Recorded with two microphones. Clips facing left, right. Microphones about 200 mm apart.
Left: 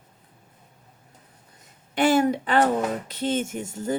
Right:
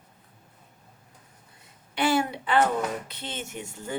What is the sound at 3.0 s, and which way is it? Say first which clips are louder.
Speech: left 12 dB; 45° left (ahead or behind).